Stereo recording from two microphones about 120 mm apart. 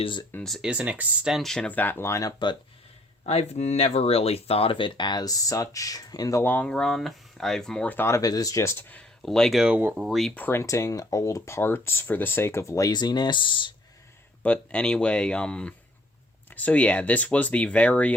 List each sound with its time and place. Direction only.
0.0 s speech: 40° left (ahead or behind)
0.4 s speech: centre (ahead or behind)
0.7 s speech: 10° right (ahead or behind); by 2.3 s 25° left (ahead or behind)
3.2 s speech: 65° left (ahead or behind); by 6.4 s 30° left (ahead or behind)
6.4 s speech: 15° left (ahead or behind)
9.2 s speech: 5° left (ahead or behind)
10.3 s speech: 15° left (ahead or behind); by 13.7 s 40° left (ahead or behind)
14.4 s speech: 10° left (ahead or behind)